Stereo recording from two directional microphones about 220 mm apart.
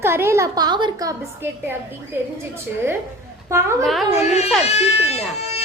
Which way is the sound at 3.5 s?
15° right (ahead or behind).